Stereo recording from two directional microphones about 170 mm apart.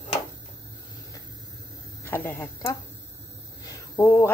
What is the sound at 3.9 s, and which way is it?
Speech, 10° left (ahead or behind).